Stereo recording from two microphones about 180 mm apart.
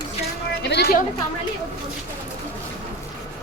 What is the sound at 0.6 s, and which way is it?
Speech, 65° left (ahead or behind).